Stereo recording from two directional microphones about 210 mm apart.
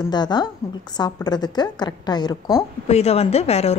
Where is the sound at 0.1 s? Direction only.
20° left (ahead or behind).